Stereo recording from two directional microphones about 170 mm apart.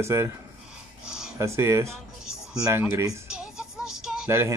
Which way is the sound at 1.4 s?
15° right (ahead or behind).